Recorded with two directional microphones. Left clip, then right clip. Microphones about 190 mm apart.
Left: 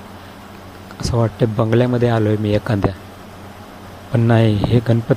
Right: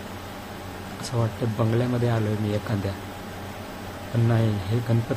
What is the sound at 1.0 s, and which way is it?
Speech, 35° left (ahead or behind).